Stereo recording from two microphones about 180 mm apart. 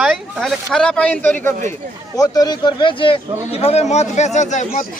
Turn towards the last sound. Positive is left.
turn(degrees=40)  # may be behind; listen again after turning